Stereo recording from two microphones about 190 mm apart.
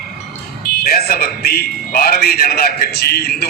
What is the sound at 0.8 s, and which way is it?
A man's voice, 55° left (ahead or behind).